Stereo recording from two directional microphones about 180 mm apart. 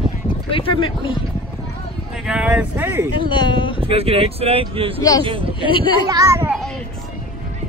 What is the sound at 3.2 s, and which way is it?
Speech, 25° left (ahead or behind).